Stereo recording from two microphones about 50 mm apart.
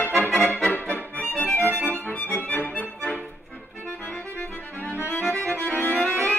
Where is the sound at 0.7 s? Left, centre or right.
Left.